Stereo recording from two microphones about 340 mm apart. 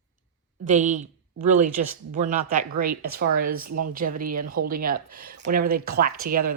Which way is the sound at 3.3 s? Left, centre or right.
Right.